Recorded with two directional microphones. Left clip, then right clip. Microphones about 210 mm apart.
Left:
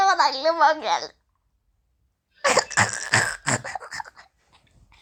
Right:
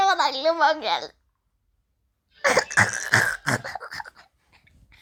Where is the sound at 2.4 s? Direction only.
Centre (ahead or behind).